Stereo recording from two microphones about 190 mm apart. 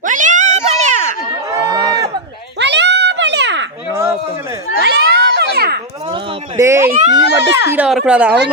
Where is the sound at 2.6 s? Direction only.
65° right (ahead or behind).